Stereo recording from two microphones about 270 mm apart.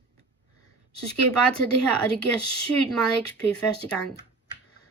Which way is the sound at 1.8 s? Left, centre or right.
Centre.